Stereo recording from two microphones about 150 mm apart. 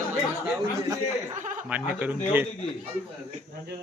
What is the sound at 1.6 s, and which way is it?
Speech, 10° right (ahead or behind).